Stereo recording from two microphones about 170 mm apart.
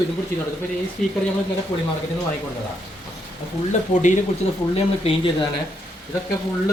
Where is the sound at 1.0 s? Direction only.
Centre (ahead or behind).